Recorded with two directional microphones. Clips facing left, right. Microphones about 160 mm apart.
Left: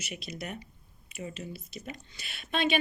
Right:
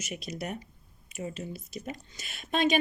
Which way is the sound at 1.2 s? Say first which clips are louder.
Right 3 dB; 30° right (ahead or behind).